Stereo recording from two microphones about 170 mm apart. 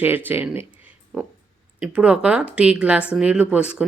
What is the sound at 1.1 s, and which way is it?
Speech, centre (ahead or behind).